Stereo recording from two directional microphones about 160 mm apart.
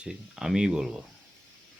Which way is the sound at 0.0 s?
5° right (ahead or behind).